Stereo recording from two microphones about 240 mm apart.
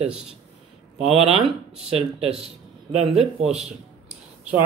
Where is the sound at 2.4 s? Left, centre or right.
Right.